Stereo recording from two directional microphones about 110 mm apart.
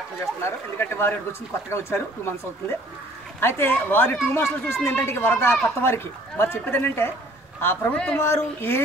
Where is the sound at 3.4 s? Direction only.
20° left (ahead or behind).